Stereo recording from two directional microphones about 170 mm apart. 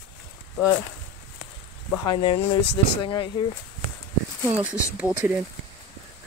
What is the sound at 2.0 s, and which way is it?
Speech, 25° left (ahead or behind).